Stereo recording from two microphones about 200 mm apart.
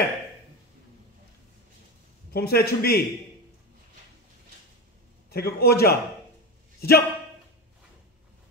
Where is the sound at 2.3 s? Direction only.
50° left (ahead or behind).